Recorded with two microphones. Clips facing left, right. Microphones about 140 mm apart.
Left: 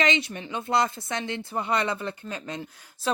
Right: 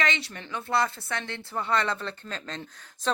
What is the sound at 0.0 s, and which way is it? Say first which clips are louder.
Speech: left 4 dB; 20° left (ahead or behind).